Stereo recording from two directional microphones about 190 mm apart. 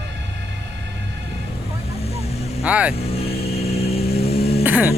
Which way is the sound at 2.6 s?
5° right (ahead or behind).